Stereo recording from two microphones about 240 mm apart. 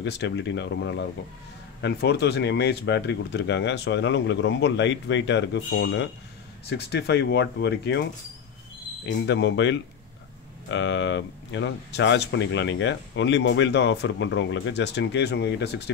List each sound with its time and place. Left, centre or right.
0.0 s speech: left
9.0 s speech: left